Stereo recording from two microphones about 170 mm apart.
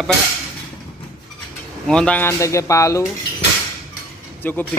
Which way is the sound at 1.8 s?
5° left (ahead or behind).